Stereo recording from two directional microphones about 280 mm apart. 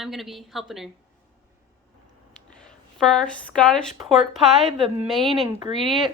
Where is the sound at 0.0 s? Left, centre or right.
Centre.